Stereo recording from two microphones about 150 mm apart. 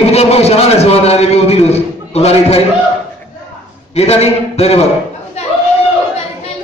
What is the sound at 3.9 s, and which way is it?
Speech, 45° left (ahead or behind).